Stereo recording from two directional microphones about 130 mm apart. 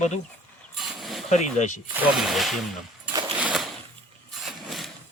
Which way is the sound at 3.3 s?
10° right (ahead or behind).